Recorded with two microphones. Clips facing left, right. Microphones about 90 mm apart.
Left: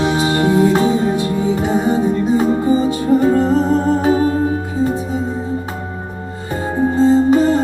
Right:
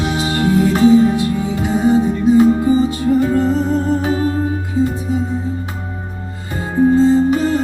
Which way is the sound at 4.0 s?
30° left (ahead or behind).